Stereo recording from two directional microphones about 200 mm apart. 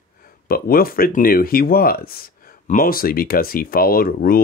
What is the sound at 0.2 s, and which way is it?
Speech, 45° left (ahead or behind).